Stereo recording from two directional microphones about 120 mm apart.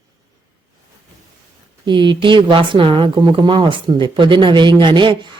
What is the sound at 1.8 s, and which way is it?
Speech, 40° right (ahead or behind).